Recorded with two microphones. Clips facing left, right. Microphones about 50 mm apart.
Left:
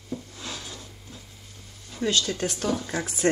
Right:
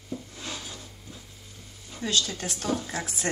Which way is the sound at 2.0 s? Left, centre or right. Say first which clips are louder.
Left 3 dB; left.